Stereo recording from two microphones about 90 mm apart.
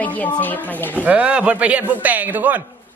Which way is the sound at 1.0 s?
15° right (ahead or behind).